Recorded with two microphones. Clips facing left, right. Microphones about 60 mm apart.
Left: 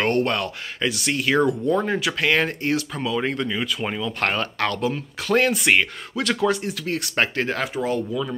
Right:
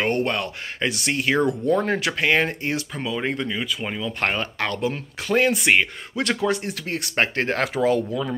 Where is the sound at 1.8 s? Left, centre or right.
Right.